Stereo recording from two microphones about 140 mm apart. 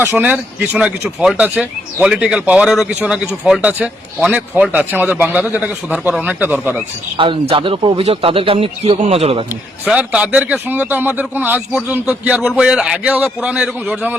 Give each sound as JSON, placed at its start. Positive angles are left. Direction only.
{"t": 0.0, "sound": "speech", "side_deg": -15}
{"t": 7.2, "sound": "a man's voice", "side_deg": -35}
{"t": 9.8, "sound": "speech", "side_deg": -10}